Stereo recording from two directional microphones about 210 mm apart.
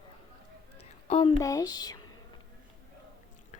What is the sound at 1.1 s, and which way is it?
Speech, 20° left (ahead or behind).